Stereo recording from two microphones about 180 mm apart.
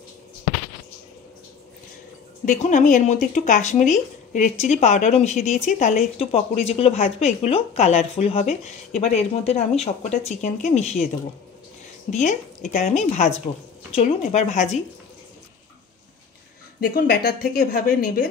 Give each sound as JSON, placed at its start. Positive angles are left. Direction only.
{"t": 2.4, "sound": "a woman's voice", "side_deg": 45}
{"t": 12.1, "sound": "speech", "side_deg": 40}
{"t": 16.8, "sound": "a woman's voice", "side_deg": 55}